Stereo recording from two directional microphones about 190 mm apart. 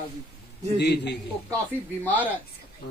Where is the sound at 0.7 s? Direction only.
65° left (ahead or behind).